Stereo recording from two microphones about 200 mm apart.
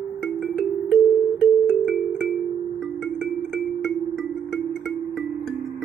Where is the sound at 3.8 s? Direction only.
Centre (ahead or behind).